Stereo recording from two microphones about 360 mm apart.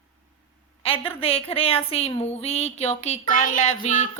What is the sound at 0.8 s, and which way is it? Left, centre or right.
A woman's voice, centre.